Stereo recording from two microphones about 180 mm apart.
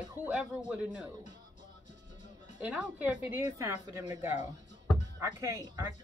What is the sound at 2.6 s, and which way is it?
A man's voice, 5° right (ahead or behind).